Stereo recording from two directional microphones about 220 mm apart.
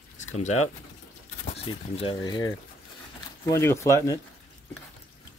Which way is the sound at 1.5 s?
25° left (ahead or behind).